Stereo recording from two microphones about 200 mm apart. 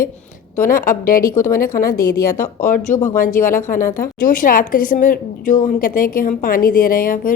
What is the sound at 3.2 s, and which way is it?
A woman's voice, 40° left (ahead or behind).